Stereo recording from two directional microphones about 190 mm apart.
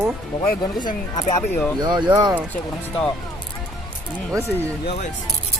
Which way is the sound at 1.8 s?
25° right (ahead or behind).